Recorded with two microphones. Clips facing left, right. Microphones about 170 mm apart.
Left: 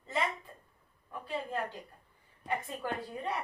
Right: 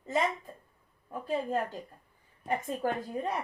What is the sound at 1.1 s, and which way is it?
A woman's voice, 40° right (ahead or behind).